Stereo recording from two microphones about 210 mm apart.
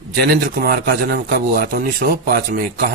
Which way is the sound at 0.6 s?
45° right (ahead or behind).